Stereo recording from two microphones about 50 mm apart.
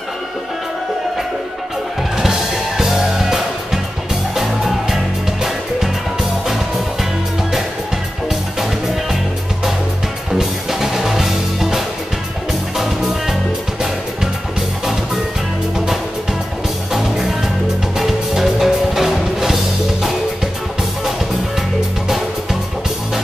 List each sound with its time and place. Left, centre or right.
2.8 s music: centre
8.3 s music: centre
10.3 s music: centre
16.9 s music: centre